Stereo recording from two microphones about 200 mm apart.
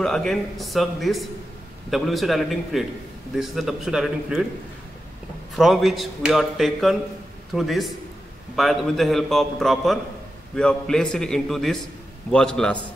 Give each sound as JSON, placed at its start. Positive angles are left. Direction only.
{"t": 0.0, "sound": "speech", "side_deg": 0}
{"t": 5.6, "sound": "speech", "side_deg": 0}